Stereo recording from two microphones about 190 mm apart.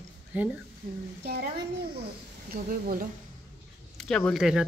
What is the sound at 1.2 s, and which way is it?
Speech, 55° right (ahead or behind).